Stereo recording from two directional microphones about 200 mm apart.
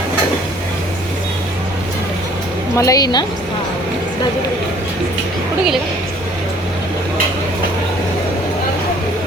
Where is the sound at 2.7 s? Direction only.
15° left (ahead or behind).